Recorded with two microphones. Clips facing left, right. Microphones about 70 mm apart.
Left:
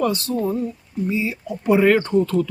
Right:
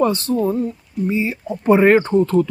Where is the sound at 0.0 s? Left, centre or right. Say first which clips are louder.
Right 4 dB; right.